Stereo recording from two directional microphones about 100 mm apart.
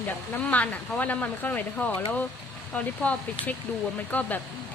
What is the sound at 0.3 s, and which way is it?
Speech, 15° left (ahead or behind).